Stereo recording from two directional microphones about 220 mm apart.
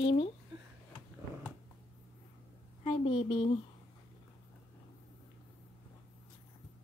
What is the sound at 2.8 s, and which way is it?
Speech, 25° left (ahead or behind).